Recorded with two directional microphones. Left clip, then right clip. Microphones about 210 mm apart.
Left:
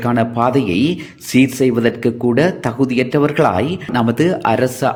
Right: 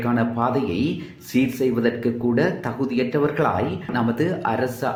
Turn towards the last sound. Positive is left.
turn(degrees=40)  # may be behind; listen again after turning